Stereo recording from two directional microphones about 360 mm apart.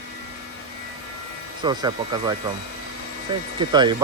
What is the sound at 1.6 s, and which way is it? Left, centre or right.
Speech, centre.